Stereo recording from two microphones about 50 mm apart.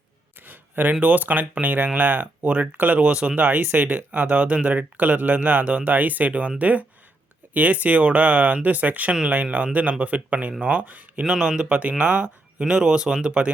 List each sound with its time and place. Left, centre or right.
0.4 s speech: right
3.6 s speech: right
11.2 s speech: centre
11.6 s speech: right
12.6 s speech: centre